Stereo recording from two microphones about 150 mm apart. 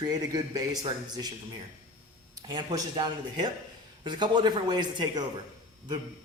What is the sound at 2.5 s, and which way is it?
A man's voice, 25° right (ahead or behind).